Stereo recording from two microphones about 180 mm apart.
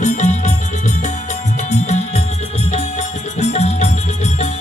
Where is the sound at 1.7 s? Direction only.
40° left (ahead or behind).